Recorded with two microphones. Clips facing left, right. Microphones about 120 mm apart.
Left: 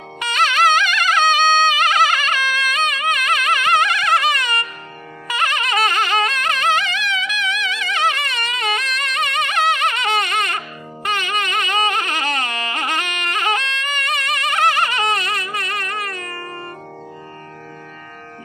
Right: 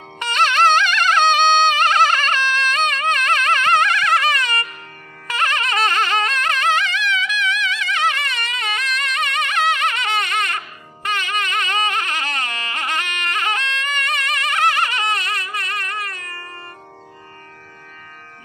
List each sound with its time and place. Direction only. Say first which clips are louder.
0.2 s music: right 1 dB; 10° left (ahead or behind)
11.1 s carnatic music: left 1 dB; 15° left (ahead or behind)